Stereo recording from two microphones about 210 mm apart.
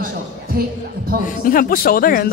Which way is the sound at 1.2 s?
40° left (ahead or behind).